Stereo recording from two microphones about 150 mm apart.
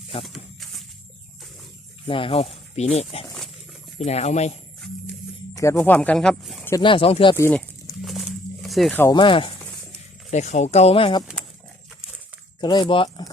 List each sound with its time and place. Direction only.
0.3 s a sound: centre (ahead or behind)
2.0 s speech: 35° left (ahead or behind)
5.5 s speech: 20° left (ahead or behind); by 6.7 s centre (ahead or behind)
6.8 s speech: 40° left (ahead or behind)
7.3 s speech: 15° left (ahead or behind)
8.0 s a sound: centre (ahead or behind)
8.9 s speech: 15° left (ahead or behind)
9.1 s speech: 35° left (ahead or behind)
10.3 s speech: 50° left (ahead or behind)
12.5 s speech: 30° left (ahead or behind)